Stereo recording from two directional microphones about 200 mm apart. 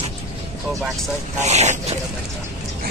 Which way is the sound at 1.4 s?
35° right (ahead or behind).